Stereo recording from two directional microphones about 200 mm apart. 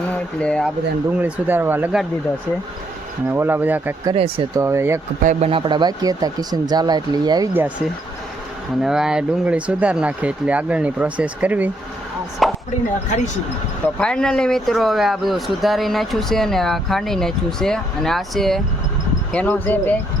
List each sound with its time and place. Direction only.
0.1 s speech: 5° left (ahead or behind)
1.2 s speech: 10° right (ahead or behind)
3.3 s speech: 10° right (ahead or behind)
4.0 s speech: 25° right (ahead or behind)
4.6 s speech: 15° right (ahead or behind)
5.2 s speech: 35° right (ahead or behind); by 7.7 s 15° right (ahead or behind)
8.8 s speech: 5° right (ahead or behind)
12.4 s chopping: centre (ahead or behind)
13.1 s speech: 35° left (ahead or behind)
14.0 s speech: 5° left (ahead or behind)